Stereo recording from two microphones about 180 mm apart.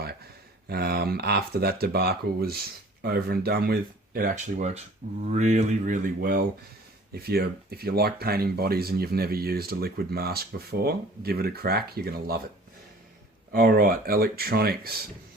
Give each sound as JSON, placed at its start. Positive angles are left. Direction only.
{"t": 0.7, "sound": "speech", "side_deg": -60}
{"t": 13.5, "sound": "speech", "side_deg": -55}